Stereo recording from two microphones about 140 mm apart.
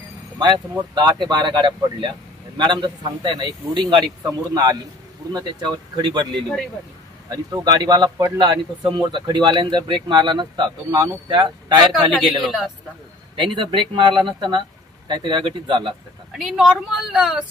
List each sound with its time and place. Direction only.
0.9 s a man's voice: 30° right (ahead or behind)
12.2 s a woman's voice: centre (ahead or behind)
13.4 s speech: 35° right (ahead or behind)
16.3 s a woman's voice: centre (ahead or behind)